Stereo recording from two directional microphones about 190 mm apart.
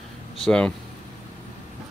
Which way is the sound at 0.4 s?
5° left (ahead or behind).